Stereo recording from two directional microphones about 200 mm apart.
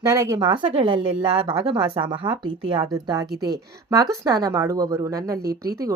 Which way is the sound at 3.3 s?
50° right (ahead or behind).